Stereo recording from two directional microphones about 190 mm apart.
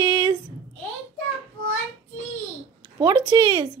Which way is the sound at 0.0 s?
25° right (ahead or behind).